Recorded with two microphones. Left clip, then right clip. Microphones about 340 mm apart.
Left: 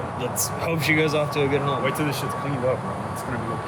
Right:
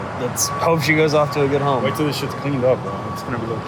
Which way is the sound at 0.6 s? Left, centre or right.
Centre.